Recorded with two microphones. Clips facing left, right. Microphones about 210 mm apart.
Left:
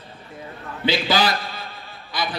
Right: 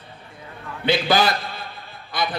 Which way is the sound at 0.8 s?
50° right (ahead or behind).